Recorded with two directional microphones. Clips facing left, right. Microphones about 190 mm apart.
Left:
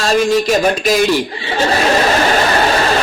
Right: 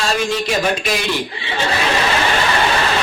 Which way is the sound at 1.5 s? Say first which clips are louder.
Left 5 dB; 40° left (ahead or behind).